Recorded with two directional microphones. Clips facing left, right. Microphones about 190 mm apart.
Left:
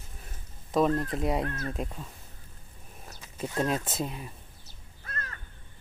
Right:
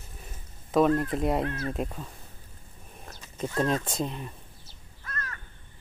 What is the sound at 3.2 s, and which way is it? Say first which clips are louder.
Speech: right 2 dB; 10° left (ahead or behind).